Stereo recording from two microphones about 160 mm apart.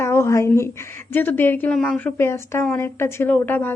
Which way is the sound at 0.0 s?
15° left (ahead or behind).